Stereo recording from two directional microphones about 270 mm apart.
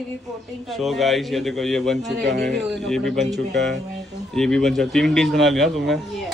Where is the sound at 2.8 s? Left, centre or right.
Centre.